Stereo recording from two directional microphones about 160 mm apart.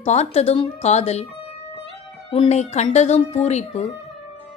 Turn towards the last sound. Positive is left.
turn(degrees=45)  # may be behind; listen again after turning